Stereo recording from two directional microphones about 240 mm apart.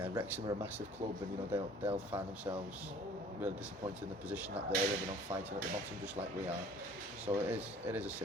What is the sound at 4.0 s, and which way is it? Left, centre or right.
Speech, centre.